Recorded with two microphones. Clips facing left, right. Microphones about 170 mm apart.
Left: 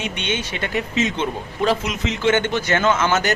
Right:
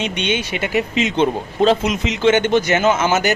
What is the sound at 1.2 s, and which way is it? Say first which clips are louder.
Speech: right 6 dB; 25° right (ahead or behind).